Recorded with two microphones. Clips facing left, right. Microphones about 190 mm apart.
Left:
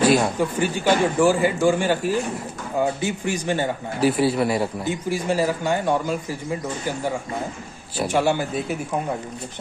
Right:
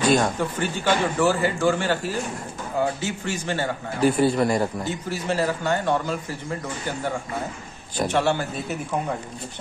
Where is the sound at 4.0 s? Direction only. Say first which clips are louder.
Even; 5° left (ahead or behind).